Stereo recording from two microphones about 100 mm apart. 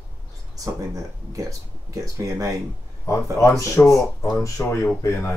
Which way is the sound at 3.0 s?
30° left (ahead or behind).